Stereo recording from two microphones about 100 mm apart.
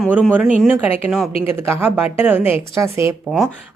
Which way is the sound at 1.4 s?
25° right (ahead or behind).